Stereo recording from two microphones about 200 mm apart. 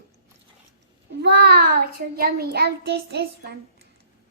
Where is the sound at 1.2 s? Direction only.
55° right (ahead or behind).